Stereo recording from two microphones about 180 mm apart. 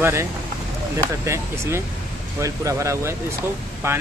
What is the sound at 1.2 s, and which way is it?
Speech, 15° right (ahead or behind).